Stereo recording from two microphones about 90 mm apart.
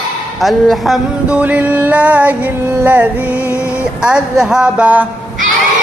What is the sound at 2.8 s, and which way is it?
Music, 20° right (ahead or behind).